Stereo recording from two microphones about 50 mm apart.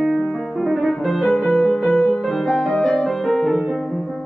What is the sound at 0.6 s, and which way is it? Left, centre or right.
Music, centre.